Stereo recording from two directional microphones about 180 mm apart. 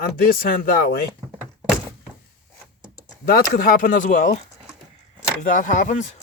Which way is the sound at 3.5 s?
50° left (ahead or behind).